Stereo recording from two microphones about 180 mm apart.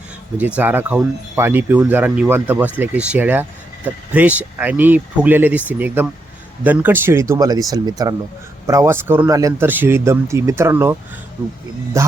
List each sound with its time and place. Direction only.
0.3 s speech: 10° right (ahead or behind)
12.0 s speech: 15° right (ahead or behind)